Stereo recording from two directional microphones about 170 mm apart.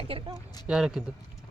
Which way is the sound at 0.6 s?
5° right (ahead or behind).